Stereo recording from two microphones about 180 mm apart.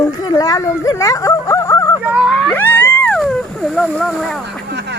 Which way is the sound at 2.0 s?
5° right (ahead or behind).